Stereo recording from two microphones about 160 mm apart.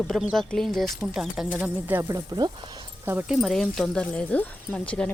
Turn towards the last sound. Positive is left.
turn(degrees=5)  # may be behind; listen again after turning